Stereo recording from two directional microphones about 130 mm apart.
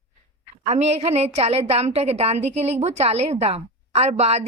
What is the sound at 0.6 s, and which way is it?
A woman's voice, 60° right (ahead or behind).